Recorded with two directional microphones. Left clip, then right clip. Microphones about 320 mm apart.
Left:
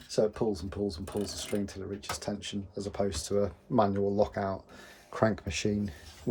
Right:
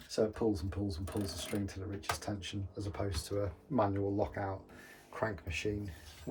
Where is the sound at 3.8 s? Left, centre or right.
Centre.